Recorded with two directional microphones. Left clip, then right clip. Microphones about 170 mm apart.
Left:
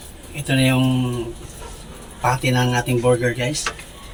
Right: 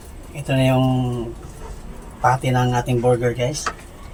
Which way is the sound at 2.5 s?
Centre (ahead or behind).